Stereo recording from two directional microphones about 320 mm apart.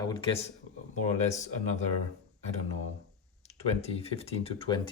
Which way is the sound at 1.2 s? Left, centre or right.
Left.